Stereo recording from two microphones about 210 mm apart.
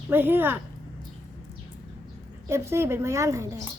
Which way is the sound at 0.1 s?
10° right (ahead or behind).